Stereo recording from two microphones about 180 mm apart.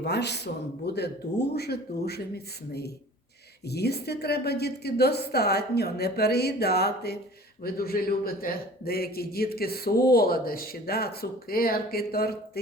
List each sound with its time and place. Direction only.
0.0 s a man's voice: 70° left (ahead or behind)
3.7 s a man's voice: 65° left (ahead or behind)